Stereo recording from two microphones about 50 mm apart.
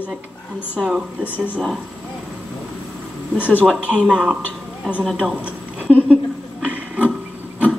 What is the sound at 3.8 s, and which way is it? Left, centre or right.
Speech, right.